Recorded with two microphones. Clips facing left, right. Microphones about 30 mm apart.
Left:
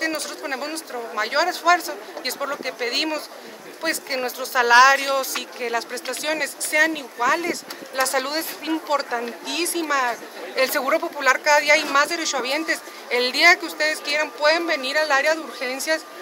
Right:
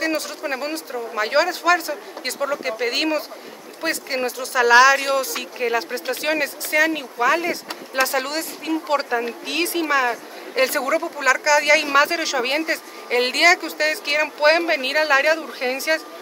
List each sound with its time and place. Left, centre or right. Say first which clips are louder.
0.0 s speech: right 2 dB; centre
5.6 s speech: right 4 dB; centre
8.1 s speech: even; centre
8.4 s speech: right 1 dB; centre
9.1 s speech: right 3 dB; centre
10.5 s speech: right 1 dB; centre
11.9 s speech: right 2 dB; centre
13.1 s speech: even; centre